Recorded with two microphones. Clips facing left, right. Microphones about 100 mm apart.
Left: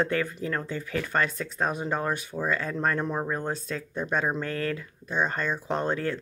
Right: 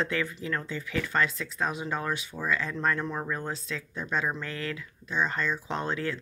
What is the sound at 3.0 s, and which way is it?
Speech, 25° left (ahead or behind).